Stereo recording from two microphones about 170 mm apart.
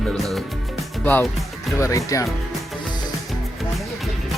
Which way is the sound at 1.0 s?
10° left (ahead or behind).